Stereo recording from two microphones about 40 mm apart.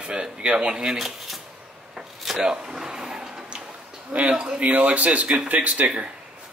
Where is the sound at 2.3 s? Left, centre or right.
Centre.